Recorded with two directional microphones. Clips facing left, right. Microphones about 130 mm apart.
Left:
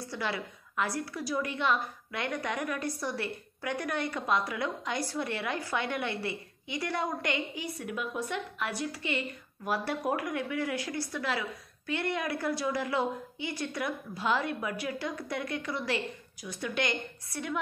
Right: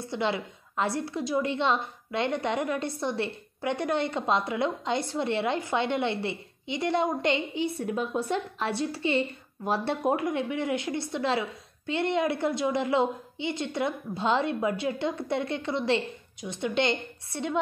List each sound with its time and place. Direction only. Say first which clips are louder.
0.0 s a woman's voice: right 5 dB; 25° right (ahead or behind)